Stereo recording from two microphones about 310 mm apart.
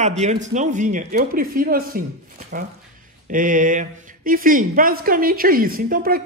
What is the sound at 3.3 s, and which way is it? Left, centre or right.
A woman's voice, right.